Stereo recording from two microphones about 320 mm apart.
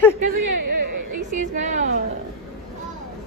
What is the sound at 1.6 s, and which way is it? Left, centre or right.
Speech, right.